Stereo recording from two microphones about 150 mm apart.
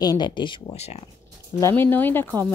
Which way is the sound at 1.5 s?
15° left (ahead or behind).